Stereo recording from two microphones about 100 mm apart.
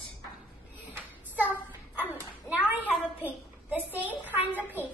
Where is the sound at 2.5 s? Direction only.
15° right (ahead or behind).